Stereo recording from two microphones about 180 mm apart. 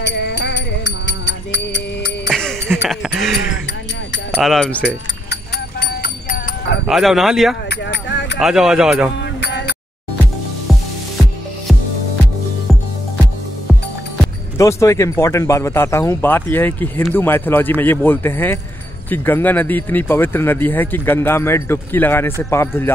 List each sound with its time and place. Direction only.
0.0 s music: 70° left (ahead or behind)
2.2 s music: centre (ahead or behind)
4.4 s speech: centre (ahead or behind)
6.0 s music: 55° left (ahead or behind)
6.9 s speech: centre (ahead or behind)
7.7 s a sound: 75° left (ahead or behind)
8.4 s speech: centre (ahead or behind)
9.2 s music: 75° left (ahead or behind)
14.6 s speech: 15° left (ahead or behind)